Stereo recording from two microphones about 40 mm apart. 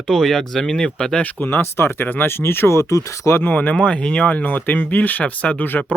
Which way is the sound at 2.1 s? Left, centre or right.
Left.